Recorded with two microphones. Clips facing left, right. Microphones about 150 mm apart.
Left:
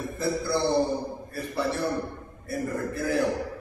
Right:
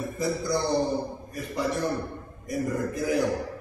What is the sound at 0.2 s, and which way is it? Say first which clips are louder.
A man's voice: left 1 dB; 15° right (ahead or behind).